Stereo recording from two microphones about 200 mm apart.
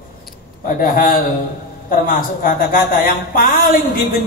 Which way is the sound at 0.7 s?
45° left (ahead or behind).